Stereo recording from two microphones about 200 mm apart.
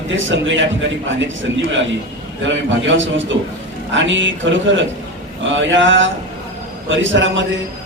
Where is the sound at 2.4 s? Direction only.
65° right (ahead or behind).